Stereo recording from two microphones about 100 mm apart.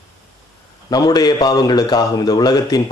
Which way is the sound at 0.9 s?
40° left (ahead or behind).